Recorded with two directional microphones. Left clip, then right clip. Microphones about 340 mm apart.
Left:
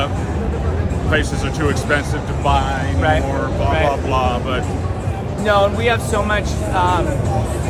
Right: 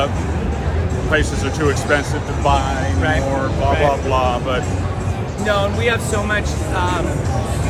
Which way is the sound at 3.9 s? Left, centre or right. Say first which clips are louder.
Right 1 dB; centre.